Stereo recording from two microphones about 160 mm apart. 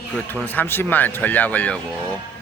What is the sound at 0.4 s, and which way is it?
Speech, 10° left (ahead or behind).